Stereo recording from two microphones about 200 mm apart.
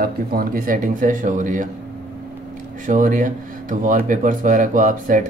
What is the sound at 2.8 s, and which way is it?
Speech, 40° right (ahead or behind).